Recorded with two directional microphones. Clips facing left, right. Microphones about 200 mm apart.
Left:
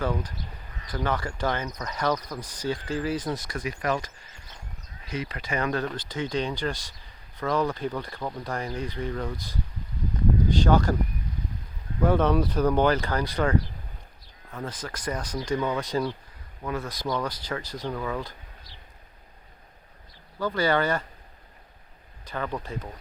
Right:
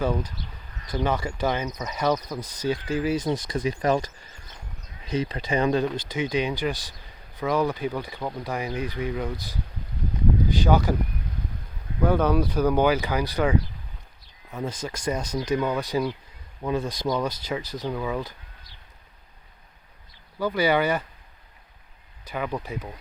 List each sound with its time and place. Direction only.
0.0 s speech: 10° right (ahead or behind)
2.4 s speech: 10° left (ahead or behind)
2.6 s speech: 15° right (ahead or behind)
3.6 s speech: 30° right (ahead or behind)
5.1 s speech: 25° right (ahead or behind)
10.7 s speech: 5° right (ahead or behind)
12.0 s speech: centre (ahead or behind)
16.6 s speech: 30° right (ahead or behind)
17.1 s speech: 10° right (ahead or behind)
17.6 s speech: 15° left (ahead or behind)
17.8 s speech: 10° right (ahead or behind)
20.4 s speech: 10° right (ahead or behind)
22.3 s speech: 10° right (ahead or behind)